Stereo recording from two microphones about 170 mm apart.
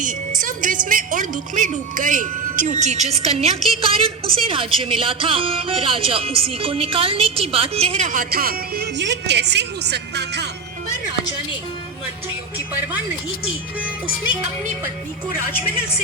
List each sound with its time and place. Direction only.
0.0 s a woman's voice: 50° right (ahead or behind); by 10.5 s 80° right